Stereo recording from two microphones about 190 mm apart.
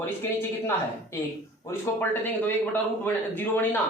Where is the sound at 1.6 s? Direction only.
15° left (ahead or behind).